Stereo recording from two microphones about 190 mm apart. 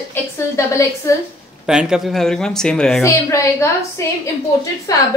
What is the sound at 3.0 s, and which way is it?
A woman's voice, 15° left (ahead or behind).